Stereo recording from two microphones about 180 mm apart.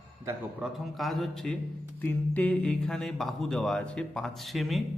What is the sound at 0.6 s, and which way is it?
A man's voice, 5° right (ahead or behind).